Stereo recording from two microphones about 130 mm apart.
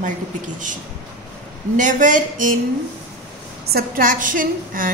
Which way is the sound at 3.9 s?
90° right.